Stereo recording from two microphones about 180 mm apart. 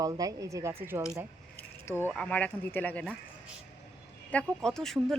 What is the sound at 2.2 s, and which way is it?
Speech, 5° left (ahead or behind).